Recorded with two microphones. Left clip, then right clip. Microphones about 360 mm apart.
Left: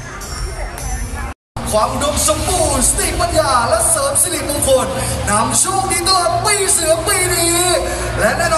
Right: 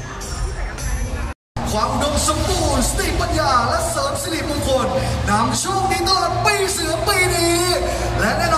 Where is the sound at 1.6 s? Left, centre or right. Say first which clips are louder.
Left 4 dB; centre.